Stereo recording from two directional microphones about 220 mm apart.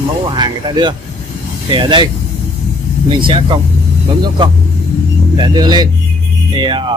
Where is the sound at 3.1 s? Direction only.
20° right (ahead or behind).